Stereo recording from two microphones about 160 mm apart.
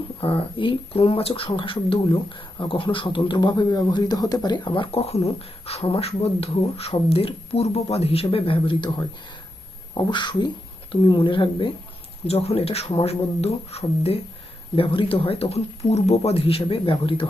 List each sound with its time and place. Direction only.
0.2 s speech: 35° left (ahead or behind)
9.9 s speech: 25° left (ahead or behind)